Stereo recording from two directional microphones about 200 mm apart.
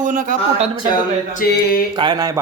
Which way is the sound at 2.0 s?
20° right (ahead or behind).